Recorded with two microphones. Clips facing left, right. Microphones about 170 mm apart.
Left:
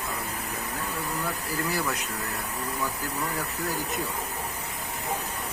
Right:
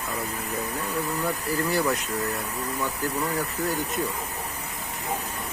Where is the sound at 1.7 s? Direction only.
Centre (ahead or behind).